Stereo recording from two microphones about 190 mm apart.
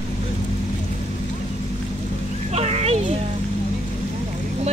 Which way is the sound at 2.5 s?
35° right (ahead or behind).